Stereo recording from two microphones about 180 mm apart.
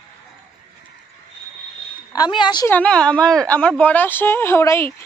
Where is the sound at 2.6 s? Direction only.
10° left (ahead or behind).